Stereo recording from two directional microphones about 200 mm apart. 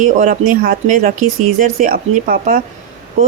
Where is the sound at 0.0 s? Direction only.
40° right (ahead or behind).